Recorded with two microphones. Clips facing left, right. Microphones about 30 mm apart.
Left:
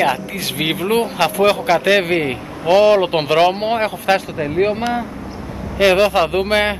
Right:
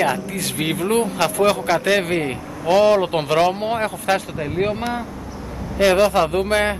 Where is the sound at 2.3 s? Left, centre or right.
Left.